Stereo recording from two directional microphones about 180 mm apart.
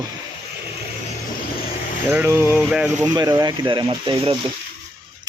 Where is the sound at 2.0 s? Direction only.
15° right (ahead or behind).